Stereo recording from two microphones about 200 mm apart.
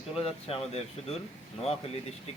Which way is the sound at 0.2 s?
30° left (ahead or behind).